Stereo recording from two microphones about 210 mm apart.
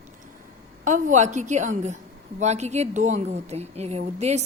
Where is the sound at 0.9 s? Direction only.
35° right (ahead or behind).